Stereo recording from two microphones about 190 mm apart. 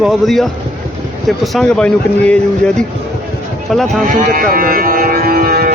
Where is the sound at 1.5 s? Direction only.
5° left (ahead or behind).